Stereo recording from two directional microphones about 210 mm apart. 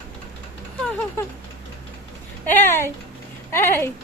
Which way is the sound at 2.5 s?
10° left (ahead or behind).